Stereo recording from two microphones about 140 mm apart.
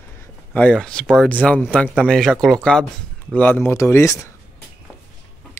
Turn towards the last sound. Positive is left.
turn(degrees=20)  # may be behind; listen again after turning